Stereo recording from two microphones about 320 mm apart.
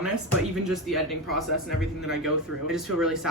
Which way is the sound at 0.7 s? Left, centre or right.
Centre.